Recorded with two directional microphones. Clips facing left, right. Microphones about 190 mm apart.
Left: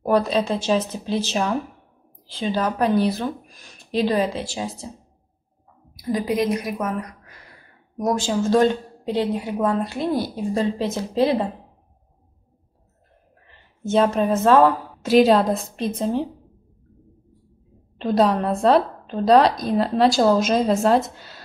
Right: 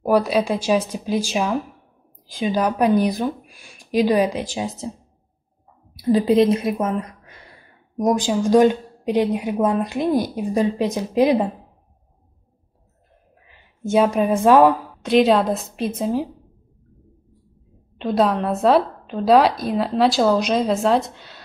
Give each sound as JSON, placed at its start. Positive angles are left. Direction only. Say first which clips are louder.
{"t": 0.0, "sound": "a woman's voice", "louder": "right 2 dB", "side_deg": -10}
{"t": 5.9, "sound": "a woman's voice", "louder": "right 7 dB", "side_deg": -30}
{"t": 13.5, "sound": "a woman's voice", "louder": "right 2 dB", "side_deg": -10}
{"t": 15.0, "sound": "speech", "louder": "left 2 dB", "side_deg": 0}
{"t": 17.9, "sound": "speech", "louder": "even", "side_deg": 0}